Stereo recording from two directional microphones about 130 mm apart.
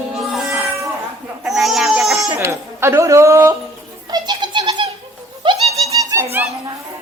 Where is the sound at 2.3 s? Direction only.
20° right (ahead or behind).